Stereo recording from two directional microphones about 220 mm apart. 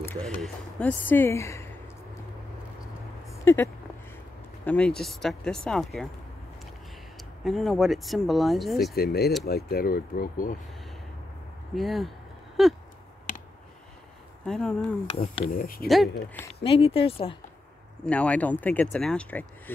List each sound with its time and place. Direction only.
0.0 s speech: 5° left (ahead or behind)
3.4 s speech: 10° left (ahead or behind)
7.2 s speech: centre (ahead or behind)
8.9 s speech: 45° left (ahead or behind)
11.7 s speech: centre (ahead or behind)
14.4 s speech: 5° left (ahead or behind)
15.1 s speech: 25° left (ahead or behind)
15.6 s speech: 40° left (ahead or behind)
15.9 s speech: centre (ahead or behind)
16.6 s speech: 25° left (ahead or behind)
18.0 s speech: 5° left (ahead or behind)